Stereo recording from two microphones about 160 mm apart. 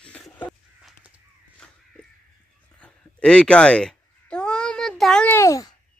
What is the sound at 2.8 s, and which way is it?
Babbling, 5° left (ahead or behind).